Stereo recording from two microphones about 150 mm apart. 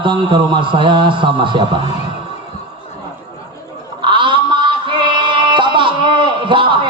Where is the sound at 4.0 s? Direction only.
35° right (ahead or behind).